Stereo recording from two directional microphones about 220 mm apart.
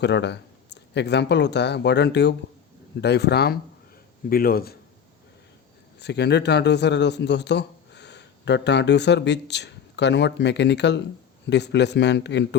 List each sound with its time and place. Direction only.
0.0 s a man's voice: 50° left (ahead or behind)
6.0 s a man's voice: 50° left (ahead or behind)